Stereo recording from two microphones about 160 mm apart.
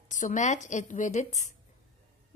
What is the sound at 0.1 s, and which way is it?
Speech, 50° left (ahead or behind).